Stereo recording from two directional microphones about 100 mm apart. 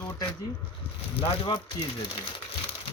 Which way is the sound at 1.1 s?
60° left (ahead or behind).